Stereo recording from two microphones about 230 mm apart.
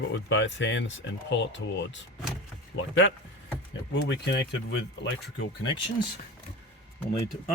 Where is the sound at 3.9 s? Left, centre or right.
Left.